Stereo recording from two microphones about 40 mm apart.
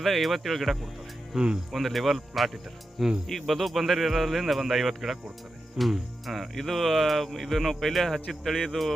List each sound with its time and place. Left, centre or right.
0.0 s speech: centre
1.3 s speech: centre
1.7 s speech: centre